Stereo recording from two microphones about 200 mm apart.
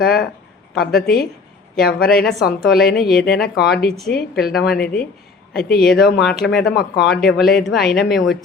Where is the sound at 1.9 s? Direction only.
45° left (ahead or behind).